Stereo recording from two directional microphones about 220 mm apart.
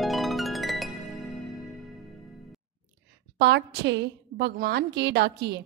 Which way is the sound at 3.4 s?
50° right (ahead or behind).